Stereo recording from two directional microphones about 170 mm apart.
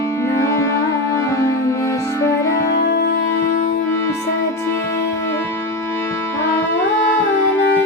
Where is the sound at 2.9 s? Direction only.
65° left (ahead or behind).